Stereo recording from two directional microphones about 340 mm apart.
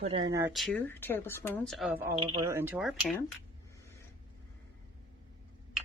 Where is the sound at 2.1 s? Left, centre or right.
Centre.